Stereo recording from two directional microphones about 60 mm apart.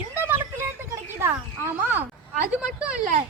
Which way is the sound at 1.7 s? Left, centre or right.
Right.